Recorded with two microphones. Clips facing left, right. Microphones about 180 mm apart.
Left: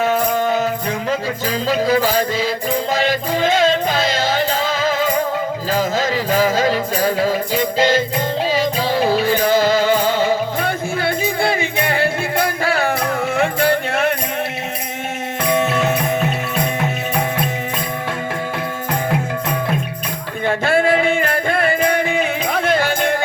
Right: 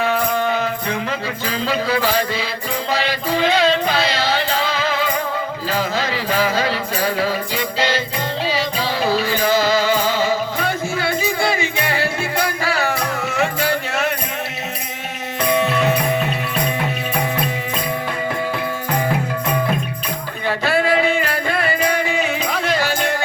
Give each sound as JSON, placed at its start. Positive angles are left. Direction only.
{"t": 0.0, "sound": "music", "side_deg": 45}
{"t": 20.5, "sound": "music", "side_deg": 50}